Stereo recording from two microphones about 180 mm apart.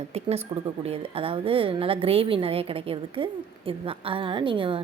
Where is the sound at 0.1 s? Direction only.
35° right (ahead or behind).